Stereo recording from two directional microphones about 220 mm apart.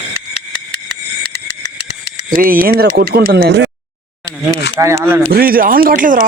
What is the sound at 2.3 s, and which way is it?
Speech, 40° right (ahead or behind).